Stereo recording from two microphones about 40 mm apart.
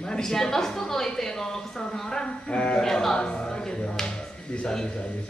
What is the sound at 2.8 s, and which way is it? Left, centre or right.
A man's voice, centre.